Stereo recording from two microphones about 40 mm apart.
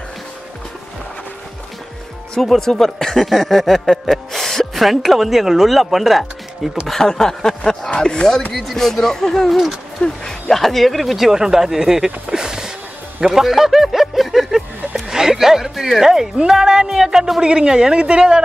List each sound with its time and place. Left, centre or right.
2.4 s speech: centre
6.9 s speech: centre
15.0 s a sound: centre
15.7 s speech: centre; by 18.4 s right